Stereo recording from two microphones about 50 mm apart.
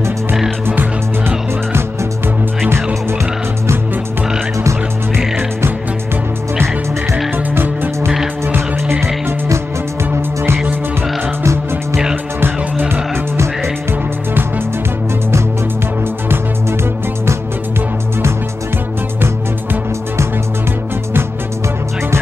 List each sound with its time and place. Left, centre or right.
0.7 s music: right
7.5 s music: right
11.4 s music: right
12.4 s music: right